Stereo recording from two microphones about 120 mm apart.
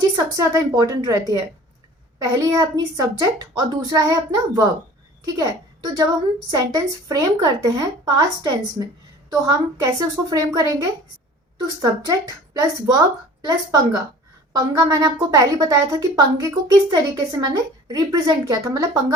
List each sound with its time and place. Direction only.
0.3 s a woman's voice: 30° right (ahead or behind)
2.2 s a woman's voice: 30° right (ahead or behind)